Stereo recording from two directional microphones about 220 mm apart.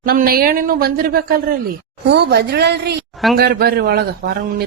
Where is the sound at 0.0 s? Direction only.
40° right (ahead or behind).